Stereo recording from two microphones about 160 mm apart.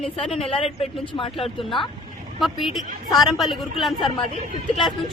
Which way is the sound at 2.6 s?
Centre (ahead or behind).